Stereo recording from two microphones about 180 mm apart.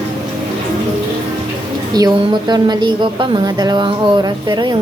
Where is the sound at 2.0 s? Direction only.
25° right (ahead or behind).